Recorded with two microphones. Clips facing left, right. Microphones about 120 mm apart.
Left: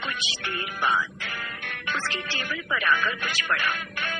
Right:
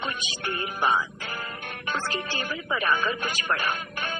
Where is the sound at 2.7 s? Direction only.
40° right (ahead or behind).